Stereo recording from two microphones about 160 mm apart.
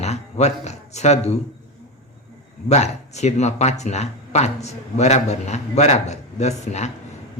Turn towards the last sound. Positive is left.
turn(degrees=45)  # may be behind; listen again after turning